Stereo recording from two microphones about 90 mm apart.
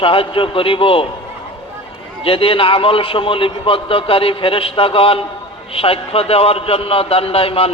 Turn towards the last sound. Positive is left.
turn(degrees=90)